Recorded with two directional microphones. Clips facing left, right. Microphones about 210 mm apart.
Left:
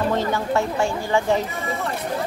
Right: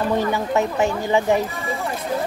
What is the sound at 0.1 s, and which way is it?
Speech, 15° right (ahead or behind).